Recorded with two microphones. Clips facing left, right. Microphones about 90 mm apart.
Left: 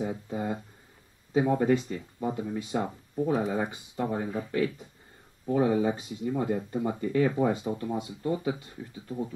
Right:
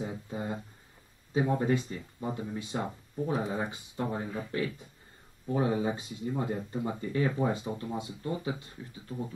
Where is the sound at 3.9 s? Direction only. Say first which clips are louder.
Left 4 dB; 20° left (ahead or behind).